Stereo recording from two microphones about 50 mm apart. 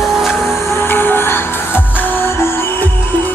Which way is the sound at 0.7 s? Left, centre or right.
Left.